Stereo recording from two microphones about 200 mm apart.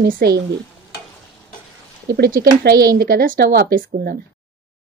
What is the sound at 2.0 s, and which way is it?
Speech, 50° right (ahead or behind).